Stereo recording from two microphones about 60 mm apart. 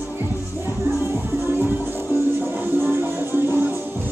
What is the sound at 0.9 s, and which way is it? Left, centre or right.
Music, right.